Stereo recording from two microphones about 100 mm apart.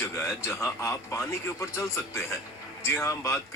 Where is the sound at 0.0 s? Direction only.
30° left (ahead or behind).